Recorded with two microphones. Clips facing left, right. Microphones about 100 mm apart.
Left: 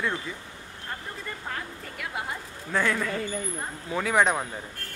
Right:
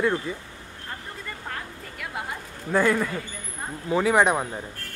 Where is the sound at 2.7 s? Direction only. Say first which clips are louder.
Right 4 dB; 10° right (ahead or behind).